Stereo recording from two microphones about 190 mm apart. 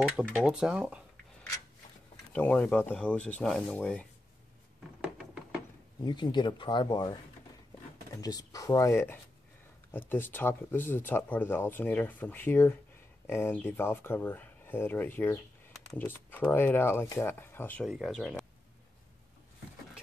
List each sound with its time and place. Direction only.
0.1 s speech: centre (ahead or behind)
2.3 s speech: 10° left (ahead or behind)
5.0 s a sound: 5° right (ahead or behind)
6.0 s speech: 25° left (ahead or behind)
8.2 s speech: 20° left (ahead or behind)
17.8 s speech: centre (ahead or behind)